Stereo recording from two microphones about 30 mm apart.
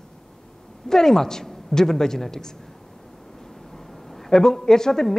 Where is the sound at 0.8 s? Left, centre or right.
Centre.